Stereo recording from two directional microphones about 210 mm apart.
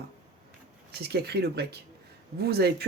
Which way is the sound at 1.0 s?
50° right (ahead or behind).